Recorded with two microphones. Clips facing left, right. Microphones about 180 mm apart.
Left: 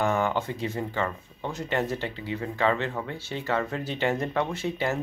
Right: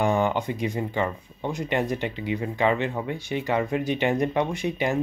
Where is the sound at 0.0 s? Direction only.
15° right (ahead or behind).